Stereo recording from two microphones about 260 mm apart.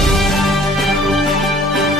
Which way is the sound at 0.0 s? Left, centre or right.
Centre.